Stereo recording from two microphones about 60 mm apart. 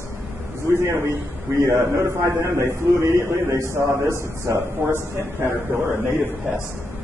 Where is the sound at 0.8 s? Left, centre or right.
Right.